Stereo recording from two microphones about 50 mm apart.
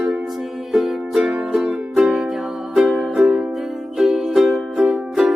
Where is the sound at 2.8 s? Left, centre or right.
Centre.